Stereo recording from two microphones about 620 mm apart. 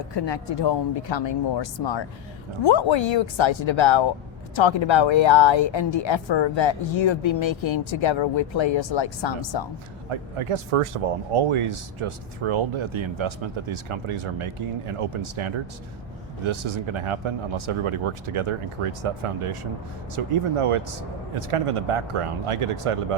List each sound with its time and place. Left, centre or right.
0.1 s speech: left
10.1 s speech: right